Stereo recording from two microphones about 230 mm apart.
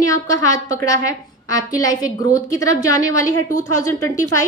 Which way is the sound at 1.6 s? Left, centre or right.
Centre.